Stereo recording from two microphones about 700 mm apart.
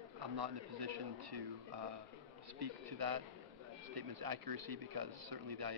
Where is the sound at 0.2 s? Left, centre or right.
Right.